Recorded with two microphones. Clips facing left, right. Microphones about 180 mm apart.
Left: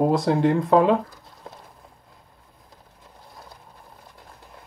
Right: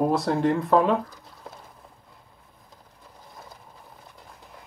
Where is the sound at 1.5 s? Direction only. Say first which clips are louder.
Left 1 dB; 5° right (ahead or behind).